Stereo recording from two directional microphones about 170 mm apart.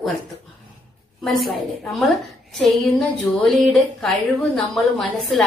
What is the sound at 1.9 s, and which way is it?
A woman's voice, centre (ahead or behind).